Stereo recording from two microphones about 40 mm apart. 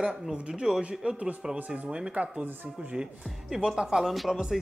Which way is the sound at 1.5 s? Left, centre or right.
Right.